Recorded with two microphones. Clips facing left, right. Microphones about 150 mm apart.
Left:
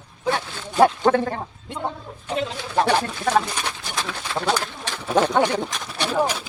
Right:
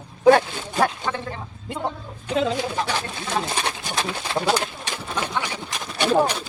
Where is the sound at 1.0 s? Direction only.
55° left (ahead or behind).